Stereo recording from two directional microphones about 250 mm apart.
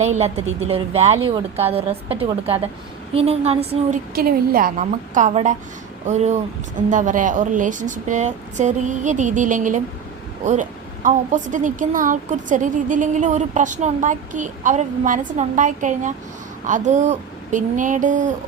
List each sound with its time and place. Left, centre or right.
0.0 s a woman's voice: right
4.1 s a woman's voice: right